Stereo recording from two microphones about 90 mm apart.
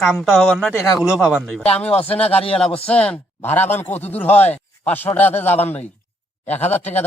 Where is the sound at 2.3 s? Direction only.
90° left.